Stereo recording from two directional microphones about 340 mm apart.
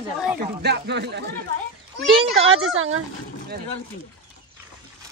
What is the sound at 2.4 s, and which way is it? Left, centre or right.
Speech, right.